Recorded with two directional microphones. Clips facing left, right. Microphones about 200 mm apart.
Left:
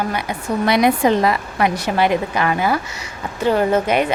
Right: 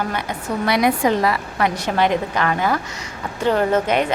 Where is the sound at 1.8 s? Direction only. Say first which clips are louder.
Left 1 dB; 10° left (ahead or behind).